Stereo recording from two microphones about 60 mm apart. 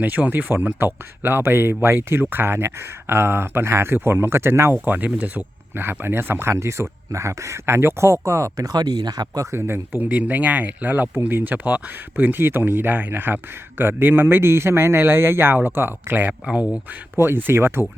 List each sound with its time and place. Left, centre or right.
0.0 s speech: right
4.7 s speech: right
5.7 s speech: right
6.5 s speech: right
9.5 s speech: right
10.0 s speech: right